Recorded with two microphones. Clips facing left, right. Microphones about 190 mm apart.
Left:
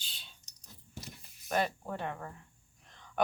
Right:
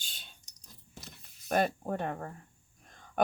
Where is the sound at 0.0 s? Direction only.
45° right (ahead or behind).